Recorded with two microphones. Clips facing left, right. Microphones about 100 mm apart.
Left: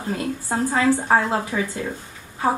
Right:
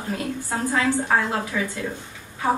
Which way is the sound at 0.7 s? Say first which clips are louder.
Left 3 dB; 25° left (ahead or behind).